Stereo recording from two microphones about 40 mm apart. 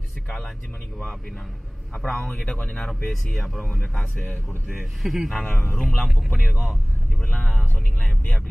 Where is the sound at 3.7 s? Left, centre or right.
Left.